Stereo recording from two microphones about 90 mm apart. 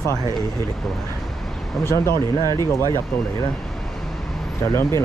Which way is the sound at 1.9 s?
30° left (ahead or behind).